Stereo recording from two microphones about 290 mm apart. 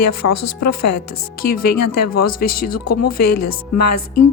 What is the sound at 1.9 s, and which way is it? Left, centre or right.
Speech, left.